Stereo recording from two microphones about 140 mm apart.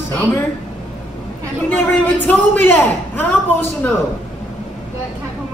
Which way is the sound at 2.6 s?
15° left (ahead or behind).